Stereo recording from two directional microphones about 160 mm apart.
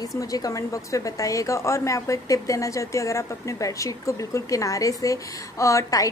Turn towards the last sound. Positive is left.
turn(degrees=20)  # may be behind; listen again after turning